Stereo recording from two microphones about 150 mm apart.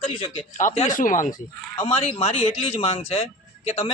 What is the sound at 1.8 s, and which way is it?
Speech, 40° left (ahead or behind).